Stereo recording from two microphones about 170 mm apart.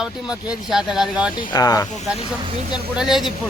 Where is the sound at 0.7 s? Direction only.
Centre (ahead or behind).